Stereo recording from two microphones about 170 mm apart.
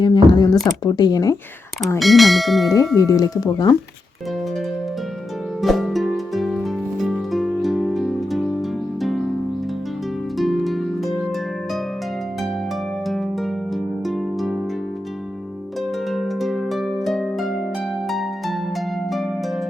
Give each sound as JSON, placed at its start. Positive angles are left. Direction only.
{"t": 0.0, "sound": "a sound", "side_deg": 25}
{"t": 0.9, "sound": "speech", "side_deg": 25}
{"t": 2.0, "sound": "speech", "side_deg": 0}
{"t": 2.9, "sound": "speech", "side_deg": 20}
{"t": 5.6, "sound": "music", "side_deg": 0}
{"t": 10.3, "sound": "harp", "side_deg": 0}
{"t": 13.1, "sound": "harp", "side_deg": 0}
{"t": 14.1, "sound": "music", "side_deg": 0}
{"t": 16.0, "sound": "harp", "side_deg": 0}
{"t": 18.1, "sound": "music", "side_deg": 0}